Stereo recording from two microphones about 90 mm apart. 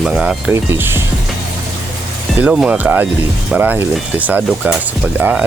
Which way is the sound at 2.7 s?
20° right (ahead or behind).